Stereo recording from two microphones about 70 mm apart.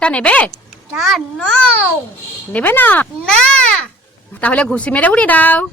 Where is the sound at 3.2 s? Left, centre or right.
Centre.